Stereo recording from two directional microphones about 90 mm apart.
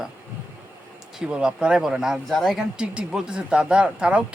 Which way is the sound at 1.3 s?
10° right (ahead or behind).